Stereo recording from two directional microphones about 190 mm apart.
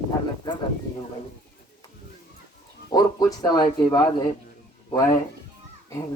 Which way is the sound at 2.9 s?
20° left (ahead or behind).